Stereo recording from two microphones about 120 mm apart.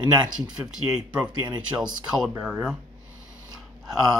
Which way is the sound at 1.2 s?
40° right (ahead or behind).